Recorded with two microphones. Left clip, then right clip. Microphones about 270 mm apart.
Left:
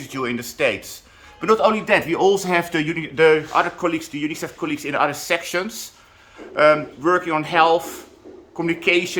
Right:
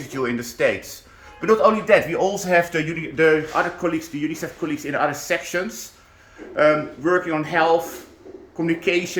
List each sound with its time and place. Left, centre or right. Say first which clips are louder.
0.1 s a man's voice: even; centre